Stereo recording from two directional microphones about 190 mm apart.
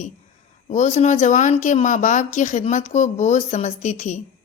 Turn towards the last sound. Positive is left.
turn(degrees=40)  # may be behind; listen again after turning